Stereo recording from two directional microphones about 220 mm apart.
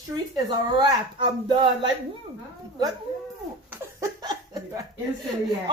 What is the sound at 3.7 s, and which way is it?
Laughter, 15° right (ahead or behind).